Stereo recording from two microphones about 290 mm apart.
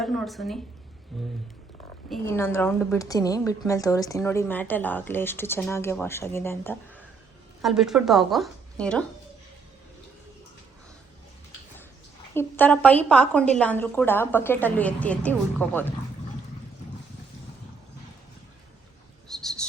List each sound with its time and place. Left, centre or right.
0.0 s a woman's voice: centre
12.3 s a woman's voice: centre
19.3 s a sound: centre